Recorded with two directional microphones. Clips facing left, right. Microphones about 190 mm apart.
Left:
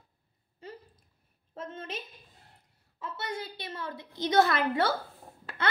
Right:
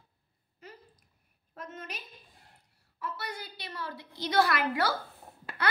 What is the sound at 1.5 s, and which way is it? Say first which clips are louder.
Speech: left 4 dB; 25° left (ahead or behind).